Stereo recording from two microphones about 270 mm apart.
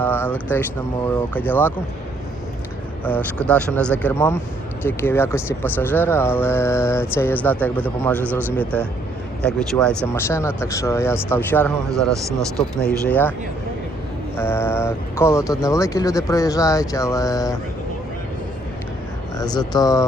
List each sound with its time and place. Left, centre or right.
0.0 s speech: centre
3.0 s speech: centre
9.4 s speech: centre
14.3 s speech: centre
19.4 s speech: centre